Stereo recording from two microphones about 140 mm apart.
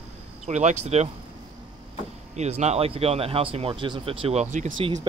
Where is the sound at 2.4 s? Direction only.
55° right (ahead or behind).